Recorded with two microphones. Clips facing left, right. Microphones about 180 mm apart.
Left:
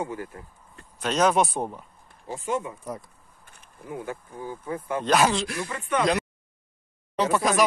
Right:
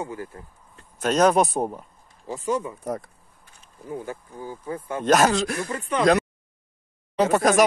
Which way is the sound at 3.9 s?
30° right (ahead or behind).